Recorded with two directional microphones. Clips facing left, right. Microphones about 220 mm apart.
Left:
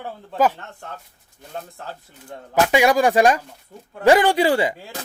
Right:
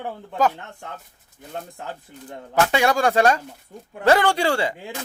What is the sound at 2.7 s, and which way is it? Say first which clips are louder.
Speech: left 5 dB; 15° left (ahead or behind).